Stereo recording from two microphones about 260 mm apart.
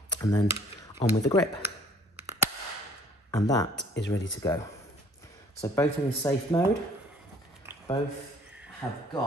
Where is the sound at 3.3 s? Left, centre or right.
Centre.